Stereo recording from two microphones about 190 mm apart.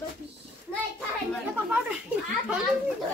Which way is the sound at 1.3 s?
5° right (ahead or behind).